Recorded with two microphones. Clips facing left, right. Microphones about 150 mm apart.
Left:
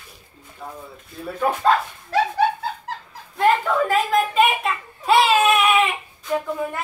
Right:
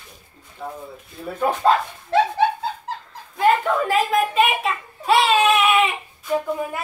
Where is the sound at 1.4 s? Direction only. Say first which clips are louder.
Right 1 dB; 20° right (ahead or behind).